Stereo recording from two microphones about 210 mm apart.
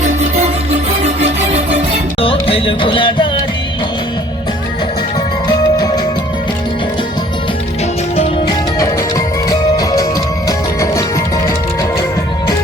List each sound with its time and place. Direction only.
2.2 s music: 25° left (ahead or behind)
5.5 s music: 20° left (ahead or behind)
8.1 s music: 30° left (ahead or behind)
8.8 s music: 15° left (ahead or behind)